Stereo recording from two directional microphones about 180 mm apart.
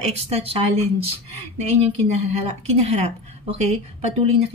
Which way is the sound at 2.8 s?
35° right (ahead or behind).